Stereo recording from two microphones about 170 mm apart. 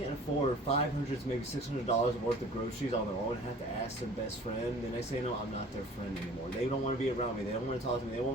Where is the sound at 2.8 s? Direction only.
50° left (ahead or behind).